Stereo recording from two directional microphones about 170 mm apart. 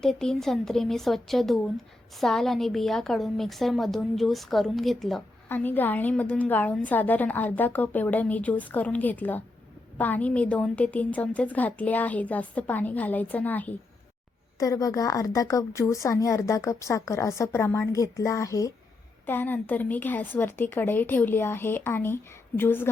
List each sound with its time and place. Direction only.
0.0 s a woman's voice: 5° left (ahead or behind)
5.5 s a woman's voice: 10° left (ahead or behind)
14.6 s a woman's voice: 20° left (ahead or behind)